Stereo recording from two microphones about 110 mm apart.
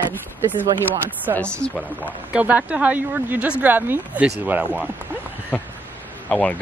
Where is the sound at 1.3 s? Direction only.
10° left (ahead or behind).